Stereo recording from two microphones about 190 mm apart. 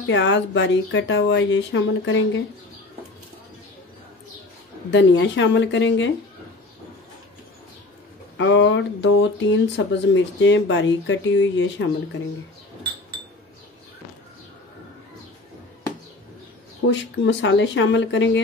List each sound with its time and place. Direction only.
0.0 s speech: 75° left (ahead or behind)
4.9 s speech: 70° left (ahead or behind)
8.4 s speech: 75° left (ahead or behind)
16.8 s speech: 70° left (ahead or behind)